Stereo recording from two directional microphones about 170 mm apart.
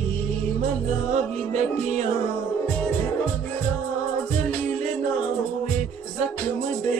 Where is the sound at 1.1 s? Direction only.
40° right (ahead or behind).